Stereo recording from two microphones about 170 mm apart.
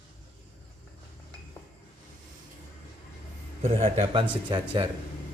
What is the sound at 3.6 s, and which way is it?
Speech, 35° right (ahead or behind).